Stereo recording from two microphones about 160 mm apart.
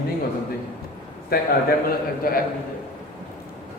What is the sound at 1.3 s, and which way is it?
A man's voice, 70° left (ahead or behind).